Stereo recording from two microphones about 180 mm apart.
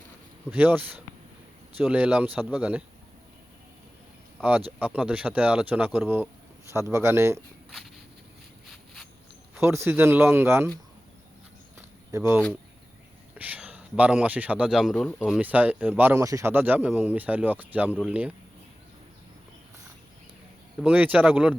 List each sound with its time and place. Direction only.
0.5 s speech: 10° right (ahead or behind)
4.4 s speech: 5° right (ahead or behind)
9.6 s speech: 15° right (ahead or behind)
12.1 s speech: 15° right (ahead or behind)
20.8 s speech: 10° right (ahead or behind)